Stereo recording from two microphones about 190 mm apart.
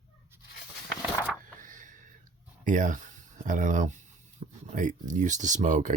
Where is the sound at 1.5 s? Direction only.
45° right (ahead or behind).